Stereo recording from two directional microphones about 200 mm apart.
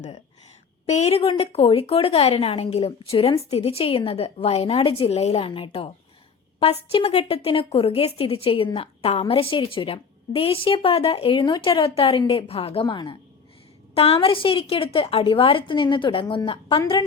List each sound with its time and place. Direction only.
0.9 s speech: 35° left (ahead or behind)